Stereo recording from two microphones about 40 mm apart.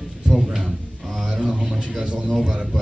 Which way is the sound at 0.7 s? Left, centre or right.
Centre.